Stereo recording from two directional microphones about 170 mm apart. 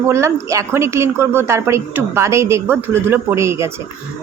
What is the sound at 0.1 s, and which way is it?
A woman's voice, 15° right (ahead or behind).